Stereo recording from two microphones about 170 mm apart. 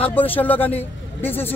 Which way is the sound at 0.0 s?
10° left (ahead or behind).